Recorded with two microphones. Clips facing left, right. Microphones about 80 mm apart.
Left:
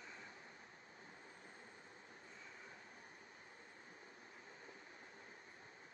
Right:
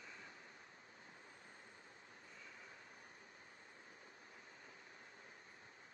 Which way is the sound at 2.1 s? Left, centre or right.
Left.